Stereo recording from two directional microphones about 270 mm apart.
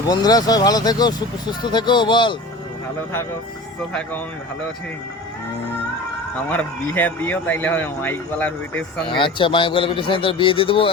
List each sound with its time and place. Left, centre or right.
0.0 s speech: centre
6.5 s speech: centre
9.0 s speech: centre